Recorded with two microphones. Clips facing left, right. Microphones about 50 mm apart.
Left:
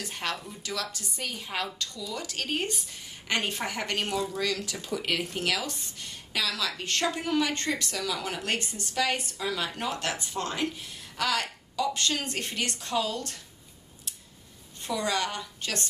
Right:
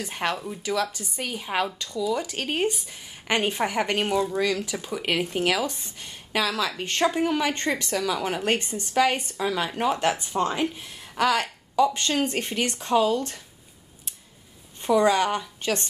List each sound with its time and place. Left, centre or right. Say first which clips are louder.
0.0 s speech: right 6 dB; right
14.9 s speech: right 9 dB; right